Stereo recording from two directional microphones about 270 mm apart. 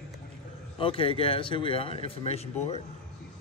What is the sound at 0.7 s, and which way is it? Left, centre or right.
Speech, centre.